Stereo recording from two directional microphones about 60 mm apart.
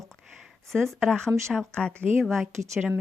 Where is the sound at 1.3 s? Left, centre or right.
Right.